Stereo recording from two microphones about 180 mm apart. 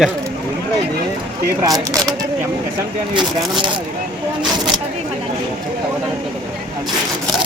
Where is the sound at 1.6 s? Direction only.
20° right (ahead or behind).